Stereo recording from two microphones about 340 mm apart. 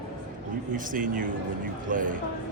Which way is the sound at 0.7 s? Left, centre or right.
Right.